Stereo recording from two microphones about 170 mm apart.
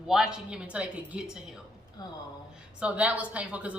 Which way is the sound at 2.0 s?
25° left (ahead or behind).